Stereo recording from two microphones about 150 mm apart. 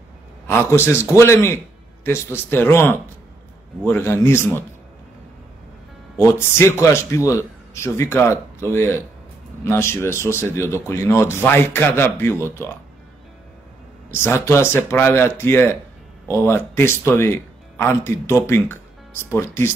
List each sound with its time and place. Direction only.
0.5 s speech: 15° left (ahead or behind)
6.1 s speech: 15° left (ahead or behind)
14.1 s speech: 15° left (ahead or behind)